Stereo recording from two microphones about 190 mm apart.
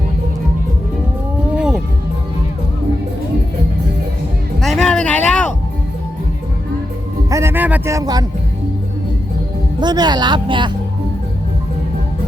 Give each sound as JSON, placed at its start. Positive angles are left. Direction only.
{"t": 1.5, "sound": "music", "side_deg": -5}
{"t": 4.6, "sound": "a sound", "side_deg": 0}
{"t": 7.3, "sound": "music", "side_deg": -15}
{"t": 9.8, "sound": "speech", "side_deg": -20}